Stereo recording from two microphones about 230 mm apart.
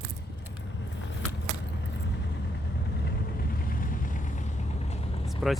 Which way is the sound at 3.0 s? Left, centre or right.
Left.